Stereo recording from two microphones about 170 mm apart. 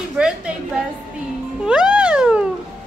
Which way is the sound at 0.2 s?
5° right (ahead or behind).